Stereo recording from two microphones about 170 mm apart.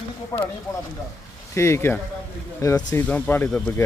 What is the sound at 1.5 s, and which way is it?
Speech, 15° left (ahead or behind).